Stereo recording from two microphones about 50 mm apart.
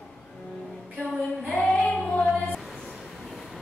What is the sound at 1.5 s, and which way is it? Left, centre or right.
Female singing, centre.